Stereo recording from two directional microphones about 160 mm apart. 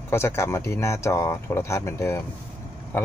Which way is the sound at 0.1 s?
15° left (ahead or behind).